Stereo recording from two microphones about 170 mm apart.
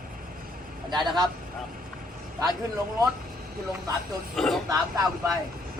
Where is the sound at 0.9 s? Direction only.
25° right (ahead or behind).